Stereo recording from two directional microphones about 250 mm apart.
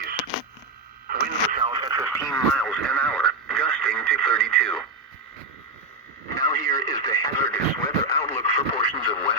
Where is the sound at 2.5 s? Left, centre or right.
Centre.